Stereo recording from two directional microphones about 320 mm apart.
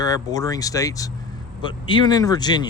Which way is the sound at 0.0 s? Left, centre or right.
Centre.